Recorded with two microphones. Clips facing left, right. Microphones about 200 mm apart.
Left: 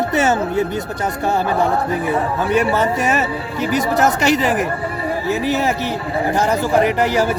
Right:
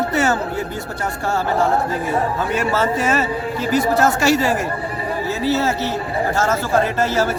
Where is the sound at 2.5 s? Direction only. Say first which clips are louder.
Left 5 dB; 15° left (ahead or behind).